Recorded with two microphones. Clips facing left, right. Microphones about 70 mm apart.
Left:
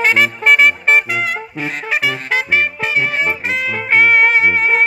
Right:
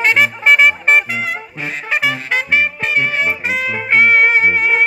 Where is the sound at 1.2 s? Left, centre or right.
Centre.